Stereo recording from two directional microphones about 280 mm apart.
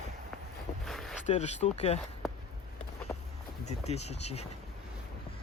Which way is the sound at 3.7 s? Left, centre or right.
Left.